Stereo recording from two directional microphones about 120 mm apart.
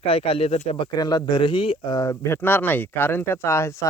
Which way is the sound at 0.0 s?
50° left (ahead or behind).